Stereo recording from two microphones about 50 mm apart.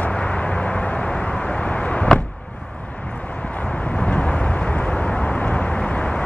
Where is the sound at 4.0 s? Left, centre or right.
Left.